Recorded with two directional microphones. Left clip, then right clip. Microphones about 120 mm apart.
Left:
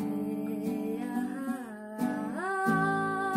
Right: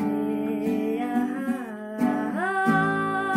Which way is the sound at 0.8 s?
20° left (ahead or behind).